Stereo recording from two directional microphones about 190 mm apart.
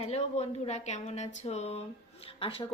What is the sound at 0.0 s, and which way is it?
A woman's voice, 35° left (ahead or behind).